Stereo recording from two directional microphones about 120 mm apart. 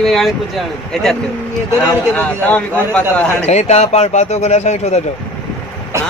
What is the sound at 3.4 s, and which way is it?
Speech, 65° left (ahead or behind).